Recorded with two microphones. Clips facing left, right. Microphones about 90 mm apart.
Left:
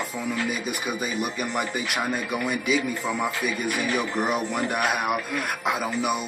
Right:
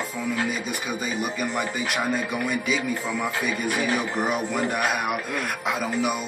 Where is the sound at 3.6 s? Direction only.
40° right (ahead or behind).